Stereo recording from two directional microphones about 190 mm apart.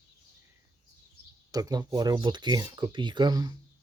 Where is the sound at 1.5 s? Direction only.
20° right (ahead or behind).